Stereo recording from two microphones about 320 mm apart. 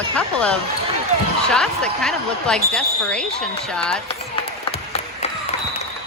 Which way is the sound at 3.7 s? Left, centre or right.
Centre.